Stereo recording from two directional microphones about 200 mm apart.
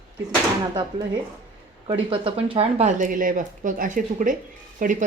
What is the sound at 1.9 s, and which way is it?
Speech, 25° right (ahead or behind).